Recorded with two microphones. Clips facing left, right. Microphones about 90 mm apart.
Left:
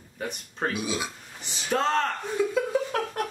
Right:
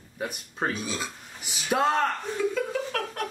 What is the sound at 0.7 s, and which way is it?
Speech, 15° left (ahead or behind).